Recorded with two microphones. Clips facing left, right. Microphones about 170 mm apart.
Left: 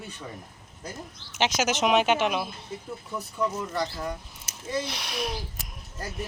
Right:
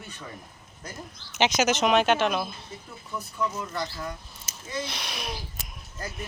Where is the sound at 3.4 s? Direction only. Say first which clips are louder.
Left 2 dB; 35° left (ahead or behind).